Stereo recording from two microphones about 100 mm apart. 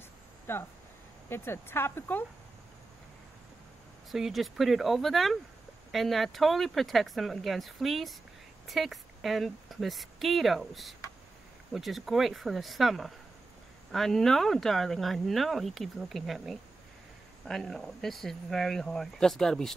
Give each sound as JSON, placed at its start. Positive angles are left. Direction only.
{"t": 0.5, "sound": "speech", "side_deg": 25}
{"t": 4.1, "sound": "speech", "side_deg": 0}